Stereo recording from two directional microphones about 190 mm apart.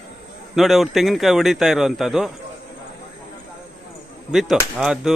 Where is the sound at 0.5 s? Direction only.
Centre (ahead or behind).